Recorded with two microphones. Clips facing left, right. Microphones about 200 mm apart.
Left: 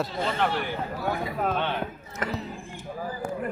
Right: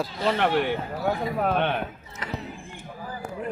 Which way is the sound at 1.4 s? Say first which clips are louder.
Right 3 dB; 60° right (ahead or behind).